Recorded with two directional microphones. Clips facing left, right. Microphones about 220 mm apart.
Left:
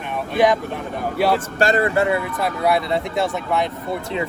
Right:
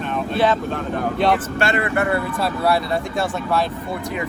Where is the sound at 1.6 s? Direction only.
35° left (ahead or behind).